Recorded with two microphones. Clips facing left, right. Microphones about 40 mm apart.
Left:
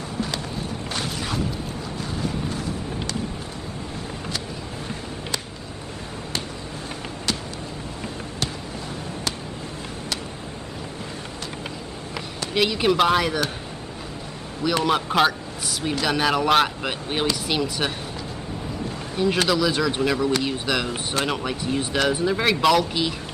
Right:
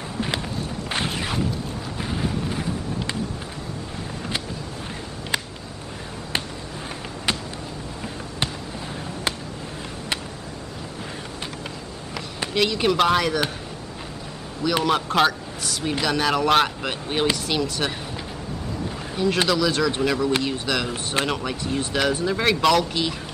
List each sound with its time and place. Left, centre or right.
12.5 s speech: centre
14.6 s speech: centre
19.1 s speech: centre